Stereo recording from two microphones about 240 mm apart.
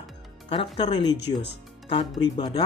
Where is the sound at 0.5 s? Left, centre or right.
Left.